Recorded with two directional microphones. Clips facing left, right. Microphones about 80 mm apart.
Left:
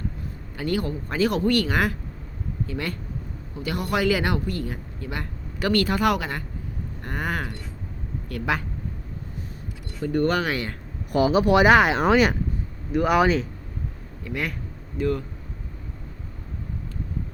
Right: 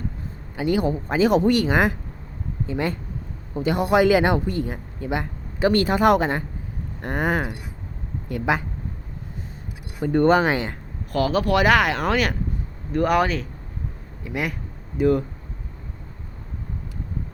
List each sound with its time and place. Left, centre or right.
0.5 s speech: centre
10.0 s speech: right
11.1 s speech: centre
12.9 s speech: centre
14.3 s speech: centre